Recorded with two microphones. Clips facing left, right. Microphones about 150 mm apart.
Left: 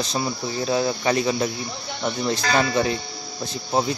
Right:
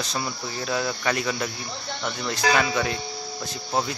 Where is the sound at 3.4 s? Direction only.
20° left (ahead or behind).